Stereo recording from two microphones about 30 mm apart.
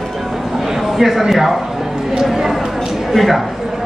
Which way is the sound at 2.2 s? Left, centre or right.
Centre.